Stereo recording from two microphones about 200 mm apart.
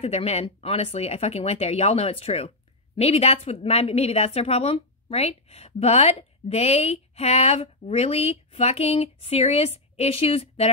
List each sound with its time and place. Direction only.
0.0 s a woman's voice: 30° left (ahead or behind)